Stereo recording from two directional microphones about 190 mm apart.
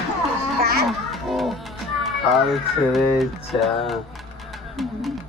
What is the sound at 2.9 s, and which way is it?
Music, centre (ahead or behind).